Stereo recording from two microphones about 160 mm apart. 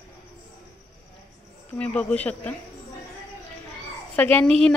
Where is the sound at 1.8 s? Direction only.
10° left (ahead or behind).